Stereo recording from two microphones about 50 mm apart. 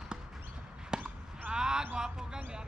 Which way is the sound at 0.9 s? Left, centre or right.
Centre.